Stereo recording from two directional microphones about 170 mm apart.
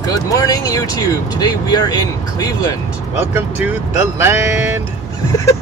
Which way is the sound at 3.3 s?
10° right (ahead or behind).